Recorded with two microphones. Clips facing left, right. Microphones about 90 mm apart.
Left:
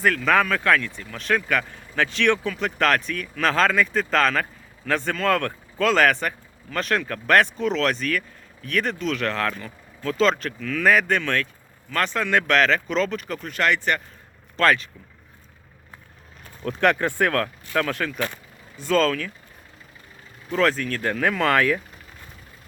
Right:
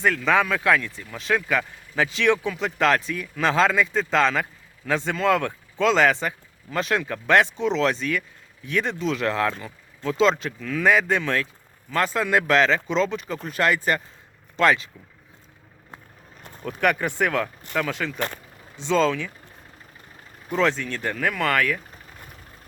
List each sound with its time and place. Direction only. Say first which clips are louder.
0.0 s speech: left 1 dB; 5° right (ahead or behind)
5.8 s speech: even; 20° right (ahead or behind)
6.7 s speech: even; 5° right (ahead or behind)
9.0 s speech: right 1 dB; 30° right (ahead or behind)
9.2 s speech: right 3 dB; 10° right (ahead or behind)
9.5 s speech: right 1 dB; 20° right (ahead or behind)
12.6 s speech: even; centre (ahead or behind)
13.3 s speech: even; 25° right (ahead or behind)
13.7 s speech: right 1 dB; 10° right (ahead or behind)
16.6 s speech: left 2 dB; 10° right (ahead or behind)
18.8 s speech: even; 20° right (ahead or behind)
20.5 s speech: left 1 dB; centre (ahead or behind)